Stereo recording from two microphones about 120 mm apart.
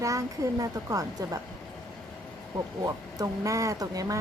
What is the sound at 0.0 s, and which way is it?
Speech, 30° right (ahead or behind).